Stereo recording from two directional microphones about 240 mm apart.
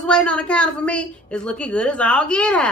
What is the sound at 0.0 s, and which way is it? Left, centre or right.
A woman's voice, centre.